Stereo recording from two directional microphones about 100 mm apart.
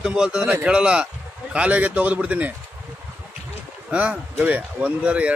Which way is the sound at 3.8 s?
15° right (ahead or behind).